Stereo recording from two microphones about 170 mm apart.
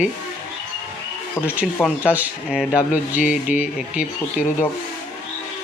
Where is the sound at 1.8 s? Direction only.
10° right (ahead or behind).